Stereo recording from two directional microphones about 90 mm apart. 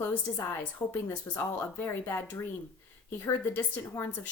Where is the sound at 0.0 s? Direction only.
25° left (ahead or behind).